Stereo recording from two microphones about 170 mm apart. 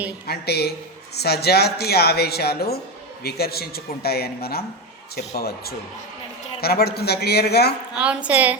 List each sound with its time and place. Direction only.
0.3 s speech: 70° left (ahead or behind)
7.9 s a woman's voice: 10° right (ahead or behind)